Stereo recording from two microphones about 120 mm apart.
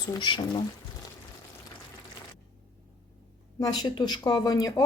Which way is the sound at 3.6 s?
35° left (ahead or behind).